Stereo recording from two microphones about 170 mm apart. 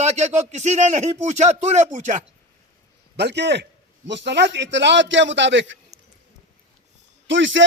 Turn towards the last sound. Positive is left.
turn(degrees=-90)